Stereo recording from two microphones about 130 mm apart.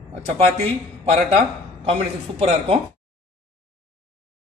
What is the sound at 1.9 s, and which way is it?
Speech, 55° right (ahead or behind).